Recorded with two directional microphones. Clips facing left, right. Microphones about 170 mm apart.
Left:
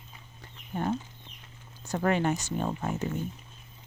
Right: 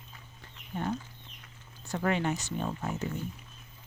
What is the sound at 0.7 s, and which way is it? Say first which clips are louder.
Speech: left 3 dB; 45° left (ahead or behind).